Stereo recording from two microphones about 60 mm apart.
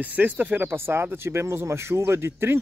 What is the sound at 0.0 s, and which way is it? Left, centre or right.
Speech, right.